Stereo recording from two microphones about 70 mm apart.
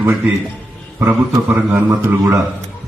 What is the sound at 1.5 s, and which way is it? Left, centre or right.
Speech, right.